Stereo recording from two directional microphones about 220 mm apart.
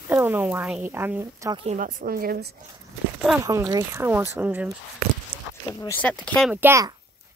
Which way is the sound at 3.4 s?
15° right (ahead or behind).